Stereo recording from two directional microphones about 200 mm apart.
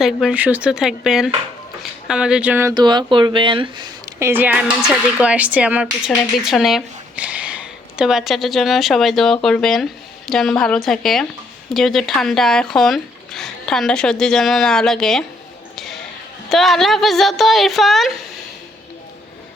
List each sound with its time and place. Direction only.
0.0 s speech: 5° right (ahead or behind); by 3.8 s 25° right (ahead or behind)
4.2 s speech: 10° right (ahead or behind)
15.7 s a sound: centre (ahead or behind)
16.5 s speech: centre (ahead or behind)